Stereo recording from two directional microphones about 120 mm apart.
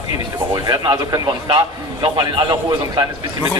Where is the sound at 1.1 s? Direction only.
35° right (ahead or behind).